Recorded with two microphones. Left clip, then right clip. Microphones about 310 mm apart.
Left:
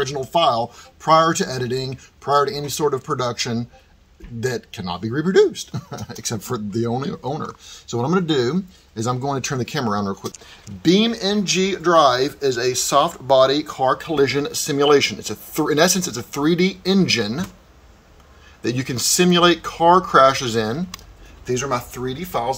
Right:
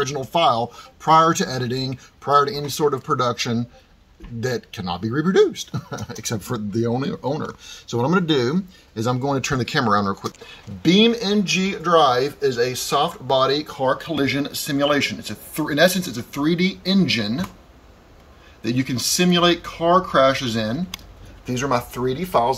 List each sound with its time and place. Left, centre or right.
0.0 s speech: centre
18.6 s speech: centre
21.5 s speech: centre